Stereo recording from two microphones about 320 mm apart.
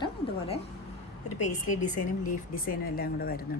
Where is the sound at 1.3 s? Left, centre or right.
Left.